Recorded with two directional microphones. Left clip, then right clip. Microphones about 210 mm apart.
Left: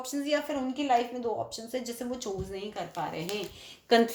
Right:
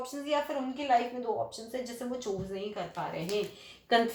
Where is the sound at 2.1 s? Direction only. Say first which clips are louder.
Even; 50° left (ahead or behind).